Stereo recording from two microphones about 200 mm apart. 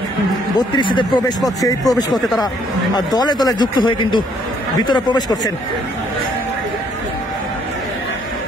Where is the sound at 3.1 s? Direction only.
20° left (ahead or behind).